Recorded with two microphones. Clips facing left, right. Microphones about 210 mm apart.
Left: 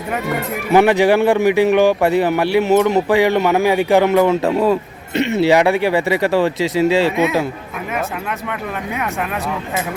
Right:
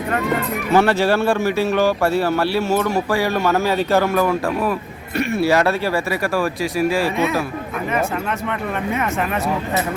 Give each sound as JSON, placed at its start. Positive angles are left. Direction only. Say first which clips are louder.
{"t": 0.7, "sound": "speech", "louder": "left 4 dB", "side_deg": 15}
{"t": 8.9, "sound": "speech", "louder": "right 2 dB", "side_deg": 0}